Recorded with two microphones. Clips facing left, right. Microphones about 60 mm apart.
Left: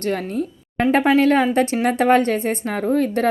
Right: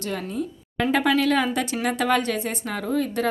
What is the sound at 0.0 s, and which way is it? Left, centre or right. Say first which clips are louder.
Speech: left 6 dB; left.